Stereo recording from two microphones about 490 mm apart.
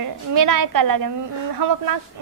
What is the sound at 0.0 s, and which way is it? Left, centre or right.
A woman's voice, right.